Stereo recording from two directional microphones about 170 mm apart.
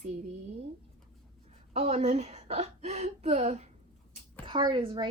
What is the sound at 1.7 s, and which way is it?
A woman's voice, 35° right (ahead or behind).